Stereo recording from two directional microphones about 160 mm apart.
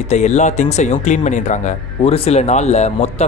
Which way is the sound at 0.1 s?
45° left (ahead or behind).